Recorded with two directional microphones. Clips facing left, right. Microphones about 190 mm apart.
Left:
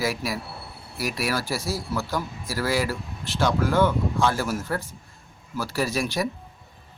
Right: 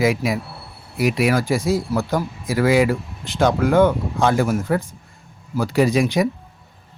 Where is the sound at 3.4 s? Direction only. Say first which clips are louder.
Right 6 dB; 55° right (ahead or behind).